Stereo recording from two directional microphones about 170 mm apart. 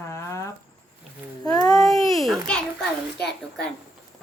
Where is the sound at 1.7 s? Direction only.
Centre (ahead or behind).